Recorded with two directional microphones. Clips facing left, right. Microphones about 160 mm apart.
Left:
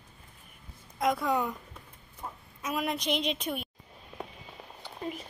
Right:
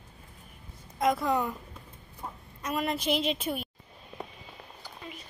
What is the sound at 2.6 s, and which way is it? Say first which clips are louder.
A woman's voice: right 1 dB; centre (ahead or behind).